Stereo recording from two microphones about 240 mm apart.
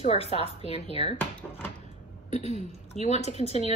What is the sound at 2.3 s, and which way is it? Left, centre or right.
A woman's voice, left.